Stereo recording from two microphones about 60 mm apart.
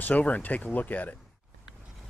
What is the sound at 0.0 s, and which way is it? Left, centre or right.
Speech, left.